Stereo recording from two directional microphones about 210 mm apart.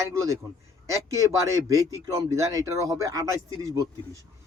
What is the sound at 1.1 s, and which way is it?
A man's voice, 15° right (ahead or behind).